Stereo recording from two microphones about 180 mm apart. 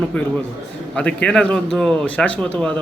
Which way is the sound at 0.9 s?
5° left (ahead or behind).